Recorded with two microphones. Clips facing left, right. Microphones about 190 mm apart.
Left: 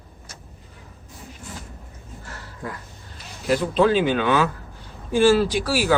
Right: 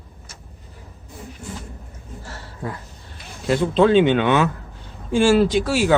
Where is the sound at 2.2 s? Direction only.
30° right (ahead or behind).